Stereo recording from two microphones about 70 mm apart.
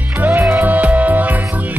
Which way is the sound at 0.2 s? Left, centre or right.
Right.